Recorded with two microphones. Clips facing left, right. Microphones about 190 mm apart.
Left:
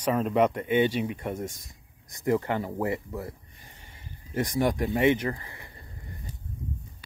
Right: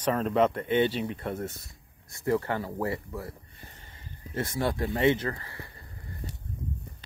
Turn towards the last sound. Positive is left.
turn(degrees=20)  # may be behind; listen again after turning